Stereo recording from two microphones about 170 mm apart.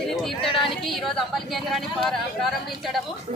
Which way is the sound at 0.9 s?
Centre (ahead or behind).